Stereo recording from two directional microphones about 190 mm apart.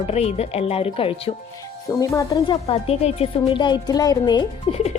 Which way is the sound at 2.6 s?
35° left (ahead or behind).